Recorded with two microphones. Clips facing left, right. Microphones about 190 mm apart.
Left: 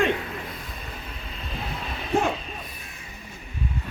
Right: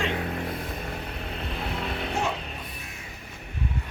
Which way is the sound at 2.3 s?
65° right (ahead or behind).